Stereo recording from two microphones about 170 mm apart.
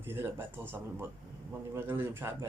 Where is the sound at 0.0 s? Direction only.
15° right (ahead or behind).